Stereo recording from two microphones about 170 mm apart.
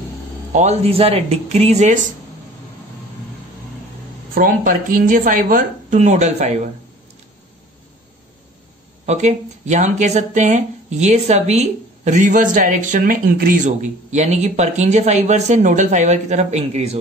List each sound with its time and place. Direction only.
0.5 s speech: 40° right (ahead or behind)
4.4 s speech: 55° right (ahead or behind)
9.0 s speech: 40° right (ahead or behind)